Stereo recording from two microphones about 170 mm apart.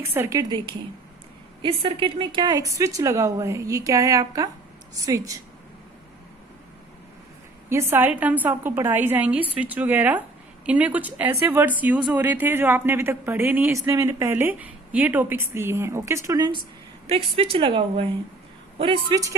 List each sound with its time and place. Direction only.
0.0 s speech: 15° right (ahead or behind)
1.6 s a woman's voice: 35° right (ahead or behind)
7.7 s speech: 15° right (ahead or behind)
17.1 s a woman's voice: 35° right (ahead or behind)